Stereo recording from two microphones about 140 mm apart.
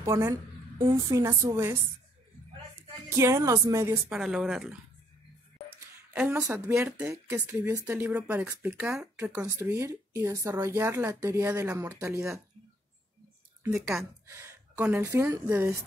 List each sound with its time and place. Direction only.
0.0 s speech: 20° right (ahead or behind)
3.2 s speech: 20° right (ahead or behind)
4.1 s speech: 5° right (ahead or behind)
6.1 s a woman's voice: 10° right (ahead or behind)
6.4 s speech: 20° right (ahead or behind)
13.7 s speech: 5° right (ahead or behind)
14.2 s a sound: 20° right (ahead or behind)
14.9 s speech: 20° right (ahead or behind)